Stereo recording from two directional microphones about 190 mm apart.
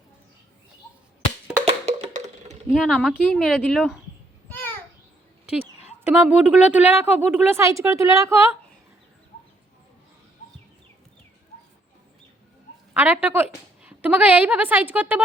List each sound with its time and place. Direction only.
1.6 s wood block: 35° right (ahead or behind)
2.7 s speech: centre (ahead or behind)
4.4 s a sound: 10° left (ahead or behind)
6.1 s a woman's voice: 5° right (ahead or behind)
12.9 s a sound: 5° right (ahead or behind)
13.2 s a woman's voice: 10° right (ahead or behind)